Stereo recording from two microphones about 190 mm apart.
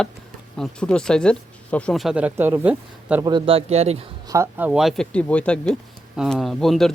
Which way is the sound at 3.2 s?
25° right (ahead or behind).